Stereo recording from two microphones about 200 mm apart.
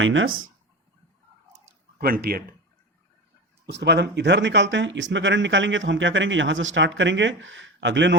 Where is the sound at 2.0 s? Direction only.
50° right (ahead or behind).